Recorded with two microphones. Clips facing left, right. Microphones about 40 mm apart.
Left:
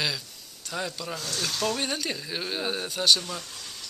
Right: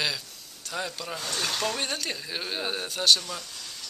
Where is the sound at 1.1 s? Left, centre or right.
Right.